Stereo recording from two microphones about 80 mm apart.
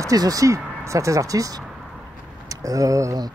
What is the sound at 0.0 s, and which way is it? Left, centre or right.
Speech, right.